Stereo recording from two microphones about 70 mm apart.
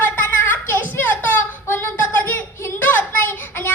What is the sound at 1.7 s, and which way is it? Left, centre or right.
Child singing, left.